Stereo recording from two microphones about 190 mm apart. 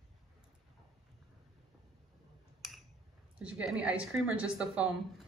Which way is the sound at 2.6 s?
Centre (ahead or behind).